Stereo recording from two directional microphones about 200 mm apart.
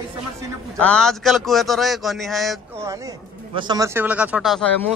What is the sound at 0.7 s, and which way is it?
A man's voice, 5° left (ahead or behind).